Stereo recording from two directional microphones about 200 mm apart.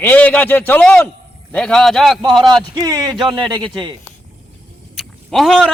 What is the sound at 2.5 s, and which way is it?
Speech, 20° right (ahead or behind).